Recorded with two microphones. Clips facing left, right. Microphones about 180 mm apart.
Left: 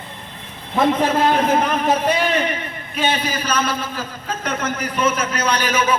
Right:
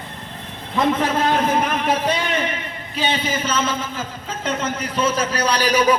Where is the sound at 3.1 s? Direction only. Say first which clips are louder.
Even; 25° right (ahead or behind).